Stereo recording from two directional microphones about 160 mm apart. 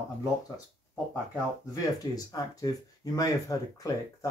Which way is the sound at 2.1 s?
25° left (ahead or behind).